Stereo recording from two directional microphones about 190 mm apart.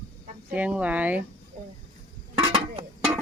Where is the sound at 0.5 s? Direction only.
10° right (ahead or behind).